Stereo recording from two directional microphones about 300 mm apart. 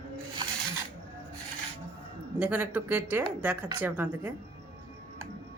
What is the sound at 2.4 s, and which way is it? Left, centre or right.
Speech, centre.